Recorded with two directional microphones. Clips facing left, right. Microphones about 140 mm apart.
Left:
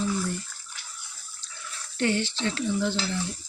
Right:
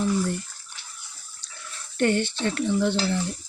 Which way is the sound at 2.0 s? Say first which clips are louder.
Right 3 dB; 50° right (ahead or behind).